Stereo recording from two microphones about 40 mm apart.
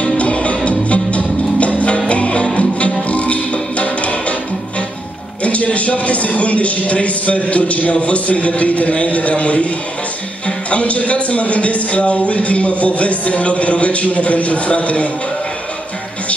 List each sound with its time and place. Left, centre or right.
0.0 s music: left
5.4 s speech: left